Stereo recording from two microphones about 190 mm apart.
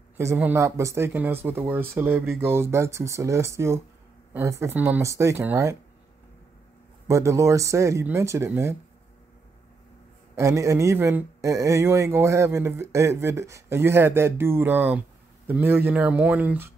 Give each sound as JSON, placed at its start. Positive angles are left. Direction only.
{"t": 0.2, "sound": "speech", "side_deg": -15}
{"t": 7.1, "sound": "speech", "side_deg": -15}
{"t": 10.3, "sound": "speech", "side_deg": -15}